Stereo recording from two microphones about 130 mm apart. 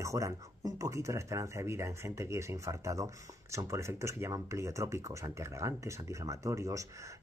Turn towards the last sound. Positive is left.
turn(degrees=-25)  # may be behind; listen again after turning